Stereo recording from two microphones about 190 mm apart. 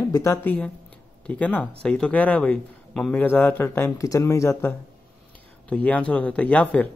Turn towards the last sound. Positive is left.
turn(degrees=5)  # may be behind; listen again after turning